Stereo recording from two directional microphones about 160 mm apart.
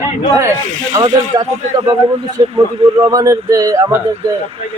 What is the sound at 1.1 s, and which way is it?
Speech, 20° right (ahead or behind).